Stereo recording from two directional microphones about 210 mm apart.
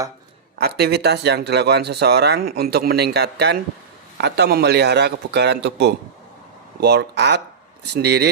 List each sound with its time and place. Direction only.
0.6 s speech: 50° right (ahead or behind)